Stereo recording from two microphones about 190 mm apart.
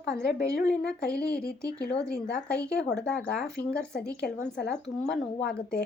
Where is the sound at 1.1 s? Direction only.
5° left (ahead or behind).